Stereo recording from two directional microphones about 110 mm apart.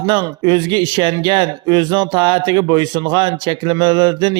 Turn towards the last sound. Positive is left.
turn(degrees=-45)  # may be behind; listen again after turning